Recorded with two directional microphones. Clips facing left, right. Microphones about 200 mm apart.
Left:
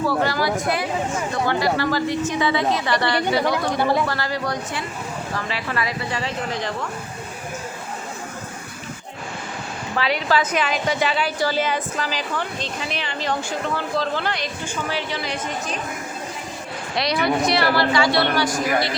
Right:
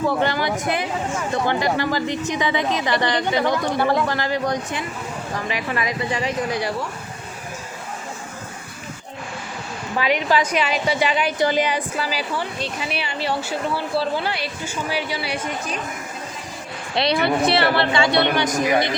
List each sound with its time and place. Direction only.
0.0 s a woman's voice: 20° right (ahead or behind)
3.8 s speech: 10° left (ahead or behind)
4.0 s a woman's voice: 20° right (ahead or behind)
10.0 s a woman's voice: 15° right (ahead or behind)
17.0 s a woman's voice: 30° right (ahead or behind)